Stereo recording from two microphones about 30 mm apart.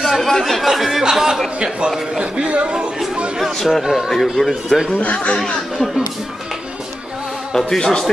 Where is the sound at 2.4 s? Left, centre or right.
Right.